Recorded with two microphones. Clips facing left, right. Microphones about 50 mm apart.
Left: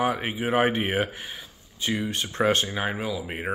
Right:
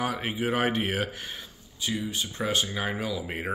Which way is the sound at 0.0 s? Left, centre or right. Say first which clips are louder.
Left 3 dB; centre.